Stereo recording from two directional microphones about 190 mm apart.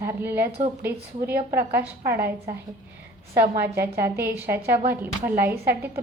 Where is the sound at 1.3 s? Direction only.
55° right (ahead or behind).